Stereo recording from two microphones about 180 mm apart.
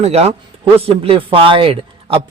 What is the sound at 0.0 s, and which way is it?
A man's voice, 35° right (ahead or behind).